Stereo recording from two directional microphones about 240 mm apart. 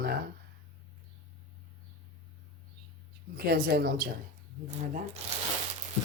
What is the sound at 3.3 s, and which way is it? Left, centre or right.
Speech, right.